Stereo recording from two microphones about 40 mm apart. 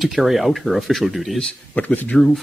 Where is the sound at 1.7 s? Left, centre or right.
Left.